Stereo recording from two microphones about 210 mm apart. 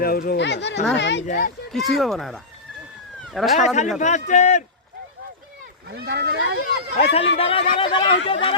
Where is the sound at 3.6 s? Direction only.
35° left (ahead or behind).